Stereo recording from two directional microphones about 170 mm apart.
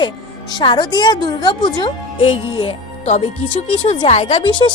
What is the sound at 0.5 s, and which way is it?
A woman's voice, 25° left (ahead or behind).